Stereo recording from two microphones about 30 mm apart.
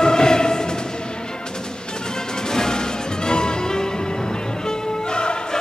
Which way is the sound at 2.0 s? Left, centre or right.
Left.